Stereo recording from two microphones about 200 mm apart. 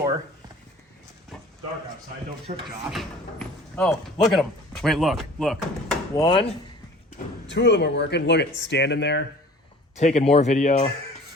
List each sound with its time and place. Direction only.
2.5 s speech: 35° right (ahead or behind)
2.9 s speech: centre (ahead or behind)
6.2 s speech: 25° left (ahead or behind)
7.4 s speech: 60° left (ahead or behind)
9.9 s speech: 35° left (ahead or behind)